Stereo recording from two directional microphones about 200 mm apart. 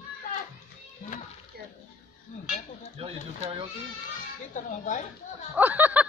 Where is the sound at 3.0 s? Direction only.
30° right (ahead or behind).